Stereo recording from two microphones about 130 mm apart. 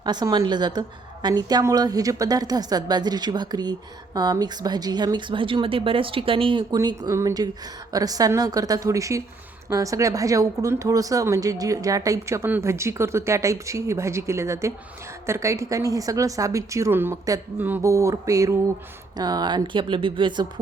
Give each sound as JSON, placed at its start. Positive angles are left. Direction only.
{"t": 0.0, "sound": "a woman's voice", "side_deg": -30}
{"t": 6.7, "sound": "speech", "side_deg": -30}
{"t": 17.9, "sound": "a woman's voice", "side_deg": -25}